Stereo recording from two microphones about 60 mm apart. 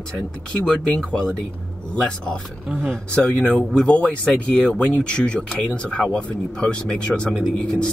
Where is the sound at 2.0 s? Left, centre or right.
Centre.